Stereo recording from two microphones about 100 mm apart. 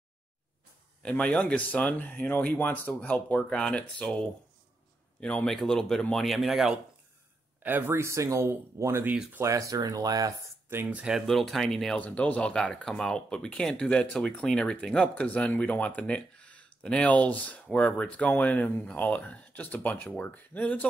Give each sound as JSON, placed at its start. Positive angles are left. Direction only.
{"t": 1.0, "sound": "speech", "side_deg": 15}
{"t": 7.6, "sound": "speech", "side_deg": -20}
{"t": 10.7, "sound": "speech", "side_deg": -20}
{"t": 11.2, "sound": "speech", "side_deg": 0}
{"t": 12.0, "sound": "speech", "side_deg": 15}